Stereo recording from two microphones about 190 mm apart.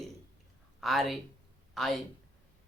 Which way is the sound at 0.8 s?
Centre (ahead or behind).